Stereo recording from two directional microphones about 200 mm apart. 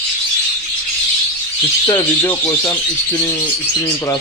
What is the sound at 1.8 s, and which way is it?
Speech, 10° left (ahead or behind).